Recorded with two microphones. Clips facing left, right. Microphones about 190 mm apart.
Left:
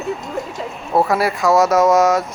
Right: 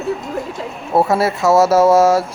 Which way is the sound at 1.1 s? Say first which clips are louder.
Right 3 dB; 25° right (ahead or behind).